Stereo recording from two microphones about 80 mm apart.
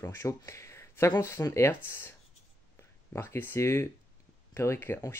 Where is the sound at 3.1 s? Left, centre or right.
Left.